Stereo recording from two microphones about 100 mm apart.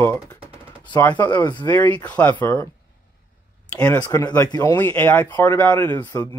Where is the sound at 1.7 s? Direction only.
20° left (ahead or behind).